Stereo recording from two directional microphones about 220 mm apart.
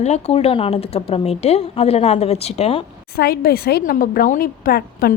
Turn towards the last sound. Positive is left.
turn(degrees=45)  # may be behind; listen again after turning